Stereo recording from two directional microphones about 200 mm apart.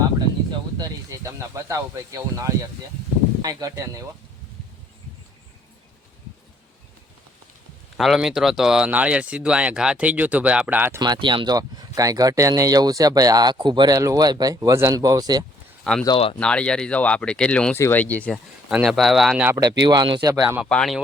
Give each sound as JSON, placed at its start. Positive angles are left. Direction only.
{"t": 0.8, "sound": "speech", "side_deg": -15}
{"t": 7.9, "sound": "speech", "side_deg": 0}
{"t": 11.0, "sound": "speech", "side_deg": -20}
{"t": 15.8, "sound": "speech", "side_deg": 5}
{"t": 16.0, "sound": "speech", "side_deg": 25}
{"t": 16.4, "sound": "speech", "side_deg": 5}
{"t": 18.7, "sound": "speech", "side_deg": -5}
{"t": 19.5, "sound": "speech", "side_deg": -20}
{"t": 20.6, "sound": "speech", "side_deg": 0}